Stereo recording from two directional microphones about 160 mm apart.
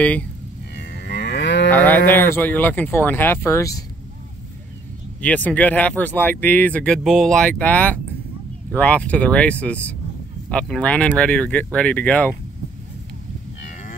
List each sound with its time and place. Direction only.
0.0 s speech: 10° left (ahead or behind)
0.7 s livestock: 90° left
1.7 s speech: 10° left (ahead or behind)
5.2 s speech: 10° left (ahead or behind)